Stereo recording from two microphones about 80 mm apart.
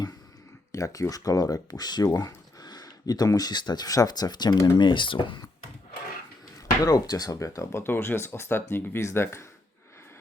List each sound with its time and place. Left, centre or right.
0.7 s speech: left
4.8 s speech: left
6.8 s speech: left
7.3 s speech: left